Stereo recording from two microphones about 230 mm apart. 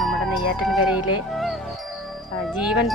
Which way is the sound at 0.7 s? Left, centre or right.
Left.